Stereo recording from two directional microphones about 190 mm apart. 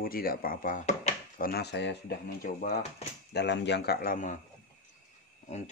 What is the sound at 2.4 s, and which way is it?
Speech, 55° left (ahead or behind).